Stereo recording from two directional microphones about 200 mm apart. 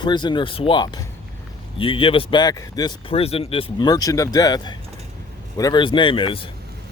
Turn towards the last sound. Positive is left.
turn(degrees=25)  # may be behind; listen again after turning